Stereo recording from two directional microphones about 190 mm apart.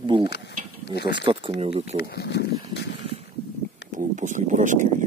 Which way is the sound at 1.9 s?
60° left (ahead or behind).